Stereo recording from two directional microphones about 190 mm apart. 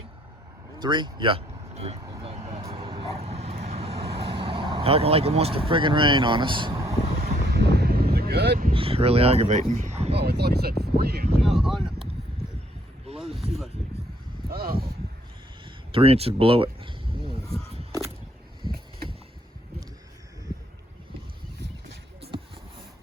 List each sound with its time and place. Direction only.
0.8 s speech: 25° right (ahead or behind)
2.0 s vehicle: 20° right (ahead or behind)
7.5 s wind: 60° right (ahead or behind)
8.7 s speech: 30° right (ahead or behind)
10.2 s speech: 60° right (ahead or behind)
11.4 s speech: centre (ahead or behind)
13.1 s a sound: centre (ahead or behind)
14.5 s speech: 50° right (ahead or behind)
15.6 s a sound: 30° right (ahead or behind)